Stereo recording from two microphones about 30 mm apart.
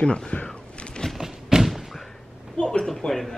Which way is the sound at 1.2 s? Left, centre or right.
Centre.